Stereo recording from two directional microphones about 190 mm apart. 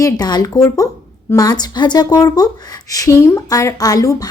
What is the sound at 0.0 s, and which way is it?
A woman's voice, 20° left (ahead or behind).